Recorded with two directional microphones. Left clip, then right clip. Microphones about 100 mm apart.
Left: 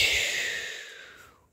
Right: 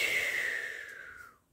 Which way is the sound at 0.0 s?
35° left (ahead or behind).